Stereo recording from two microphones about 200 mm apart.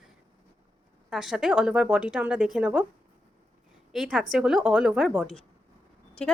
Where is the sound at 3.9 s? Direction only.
5° right (ahead or behind).